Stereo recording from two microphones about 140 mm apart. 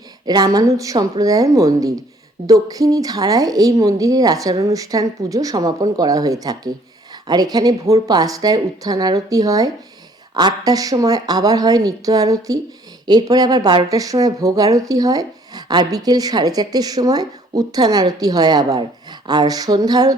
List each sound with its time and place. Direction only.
0.3 s speech: 25° right (ahead or behind)